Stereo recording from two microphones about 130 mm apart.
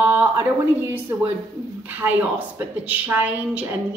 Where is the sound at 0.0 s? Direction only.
15° right (ahead or behind).